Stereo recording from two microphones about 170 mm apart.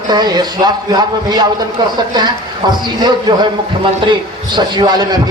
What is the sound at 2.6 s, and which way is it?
Speech, 25° right (ahead or behind).